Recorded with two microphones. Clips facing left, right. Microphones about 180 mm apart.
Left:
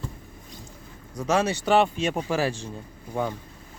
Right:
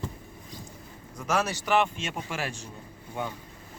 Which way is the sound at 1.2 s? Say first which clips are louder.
Left 5 dB; 30° left (ahead or behind).